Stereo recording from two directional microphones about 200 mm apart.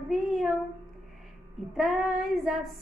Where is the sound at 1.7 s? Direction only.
Centre (ahead or behind).